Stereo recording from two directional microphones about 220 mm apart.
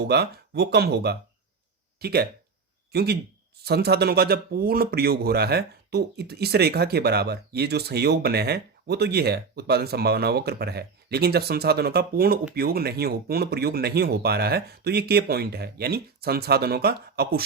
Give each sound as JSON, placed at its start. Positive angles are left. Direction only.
{"t": 0.0, "sound": "a man's voice", "side_deg": -45}